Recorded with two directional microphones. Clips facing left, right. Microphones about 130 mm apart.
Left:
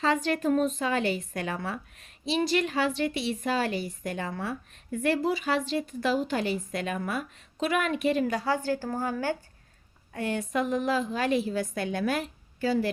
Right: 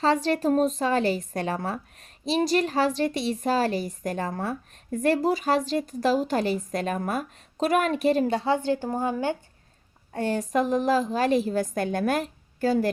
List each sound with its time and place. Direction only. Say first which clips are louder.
0.0 s a woman's voice: right 3 dB; 35° right (ahead or behind)
10.1 s a woman's voice: right 4 dB; 35° right (ahead or behind)